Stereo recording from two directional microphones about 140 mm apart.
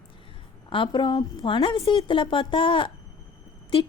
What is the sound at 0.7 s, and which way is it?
A woman's voice, 35° left (ahead or behind).